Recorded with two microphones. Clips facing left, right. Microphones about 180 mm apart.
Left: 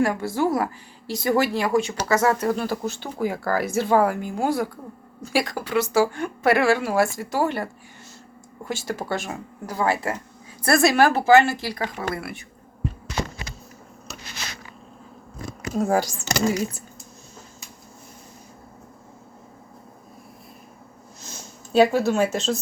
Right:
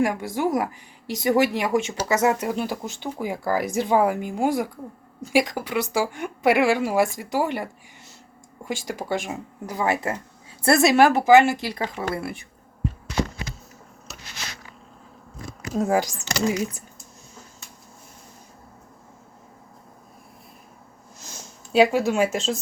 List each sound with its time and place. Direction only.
0.0 s speech: 15° right (ahead or behind)
15.8 s speech: 15° right (ahead or behind)
21.7 s speech: 10° right (ahead or behind)